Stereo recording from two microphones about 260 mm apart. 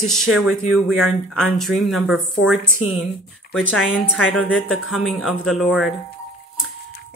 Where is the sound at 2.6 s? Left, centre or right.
Left.